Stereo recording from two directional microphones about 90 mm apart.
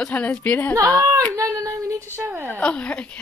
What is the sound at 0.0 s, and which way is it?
Speech, 15° left (ahead or behind).